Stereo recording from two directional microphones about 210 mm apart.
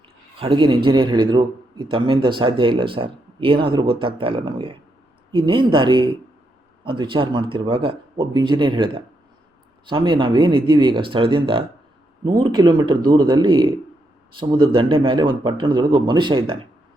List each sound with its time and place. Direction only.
0.3 s a man's voice: 25° right (ahead or behind)